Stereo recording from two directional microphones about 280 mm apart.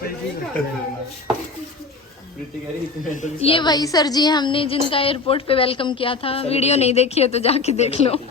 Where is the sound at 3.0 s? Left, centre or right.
Left.